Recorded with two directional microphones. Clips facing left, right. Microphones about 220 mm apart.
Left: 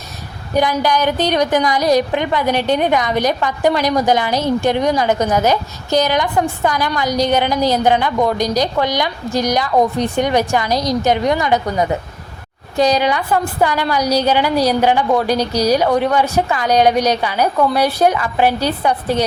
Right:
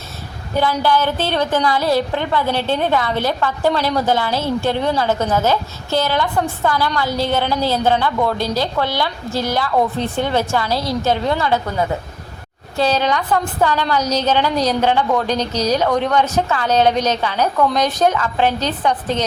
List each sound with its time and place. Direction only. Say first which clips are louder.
0.5 s a woman's voice: left 1 dB; 15° left (ahead or behind)